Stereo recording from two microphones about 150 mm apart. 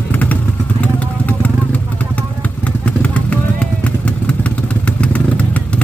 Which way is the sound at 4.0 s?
10° left (ahead or behind).